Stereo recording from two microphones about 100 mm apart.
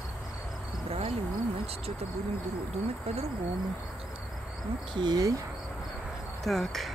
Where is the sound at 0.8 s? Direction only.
85° right.